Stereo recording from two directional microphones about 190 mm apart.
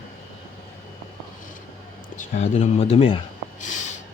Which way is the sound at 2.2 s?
35° left (ahead or behind).